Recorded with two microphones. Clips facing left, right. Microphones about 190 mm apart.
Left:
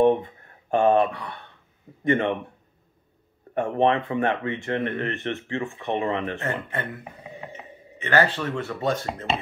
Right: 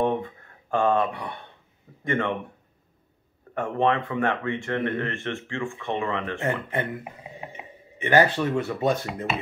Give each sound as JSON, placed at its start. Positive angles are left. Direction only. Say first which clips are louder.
{"t": 0.0, "sound": "a sound", "louder": "left 5 dB", "side_deg": 20}
{"t": 1.1, "sound": "speech", "louder": "right 2 dB", "side_deg": -20}
{"t": 2.0, "sound": "speech", "louder": "left 4 dB", "side_deg": 20}
{"t": 3.5, "sound": "speech", "louder": "left 2 dB", "side_deg": 20}
{"t": 6.4, "sound": "speech", "louder": "right 2 dB", "side_deg": -15}